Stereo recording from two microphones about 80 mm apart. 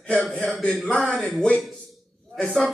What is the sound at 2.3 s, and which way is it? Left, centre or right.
Speech, centre.